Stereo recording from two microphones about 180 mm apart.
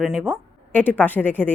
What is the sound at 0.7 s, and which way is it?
Speech, 10° left (ahead or behind).